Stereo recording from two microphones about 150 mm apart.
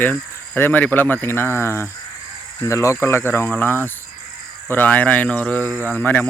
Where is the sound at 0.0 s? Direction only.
15° left (ahead or behind).